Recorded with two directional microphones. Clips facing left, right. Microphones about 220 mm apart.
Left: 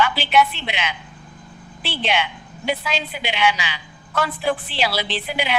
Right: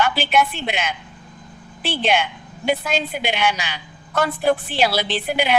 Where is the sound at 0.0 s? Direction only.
50° right (ahead or behind).